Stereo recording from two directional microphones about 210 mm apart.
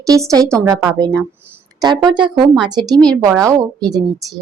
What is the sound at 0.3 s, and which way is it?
A woman's voice, 15° right (ahead or behind).